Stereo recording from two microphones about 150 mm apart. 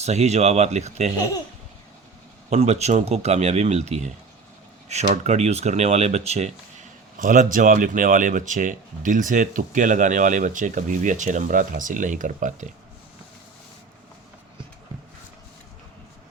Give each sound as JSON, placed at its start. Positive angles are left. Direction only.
{"t": 0.0, "sound": "speech", "side_deg": -50}
{"t": 2.5, "sound": "speech", "side_deg": -45}